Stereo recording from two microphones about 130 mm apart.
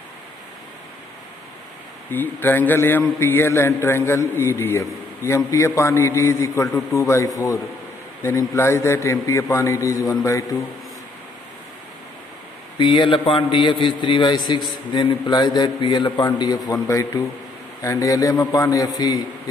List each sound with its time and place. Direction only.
2.0 s a man's voice: 15° left (ahead or behind)
12.7 s a man's voice: 40° left (ahead or behind)